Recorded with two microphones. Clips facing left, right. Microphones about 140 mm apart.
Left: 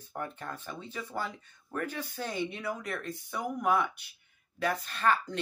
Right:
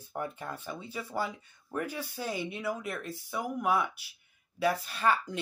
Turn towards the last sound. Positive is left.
turn(degrees=-10)  # may be behind; listen again after turning